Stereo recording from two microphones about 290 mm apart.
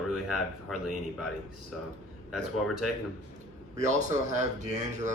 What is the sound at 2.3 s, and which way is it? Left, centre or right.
Speech, centre.